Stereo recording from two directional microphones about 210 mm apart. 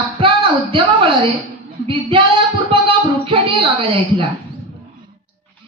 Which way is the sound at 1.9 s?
25° right (ahead or behind).